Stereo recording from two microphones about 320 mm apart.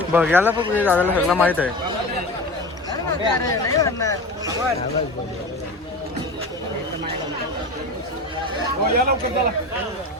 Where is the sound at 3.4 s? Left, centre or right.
Centre.